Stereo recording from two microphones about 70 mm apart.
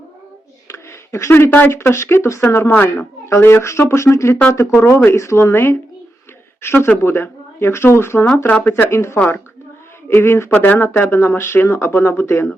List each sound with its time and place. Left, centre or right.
0.7 s a sound: left
1.7 s speech: left
6.8 s speech: left
8.4 s speech: left
10.5 s speech: left